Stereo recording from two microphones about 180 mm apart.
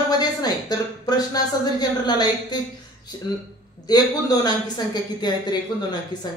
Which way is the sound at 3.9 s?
20° left (ahead or behind).